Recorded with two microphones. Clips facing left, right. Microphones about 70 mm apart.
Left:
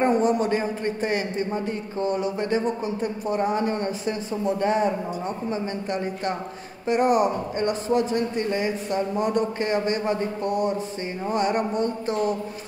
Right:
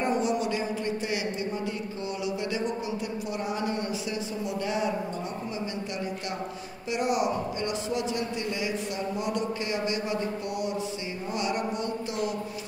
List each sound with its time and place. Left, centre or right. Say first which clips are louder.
0.0 s a man's voice: left 6 dB; left
6.9 s a man's voice: left 7 dB; left